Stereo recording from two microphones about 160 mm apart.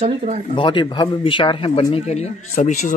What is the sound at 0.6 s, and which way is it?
Speech, 30° left (ahead or behind).